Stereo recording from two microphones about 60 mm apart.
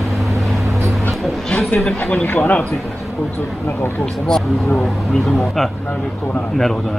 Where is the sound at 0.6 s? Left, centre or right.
Right.